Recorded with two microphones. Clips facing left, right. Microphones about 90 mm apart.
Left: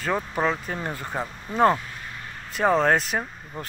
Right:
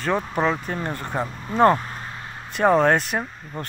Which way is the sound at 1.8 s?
40° right (ahead or behind).